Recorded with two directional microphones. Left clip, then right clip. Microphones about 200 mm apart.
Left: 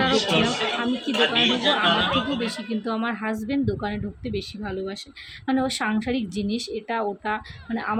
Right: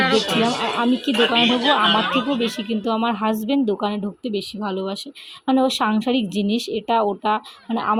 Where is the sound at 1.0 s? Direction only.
25° right (ahead or behind).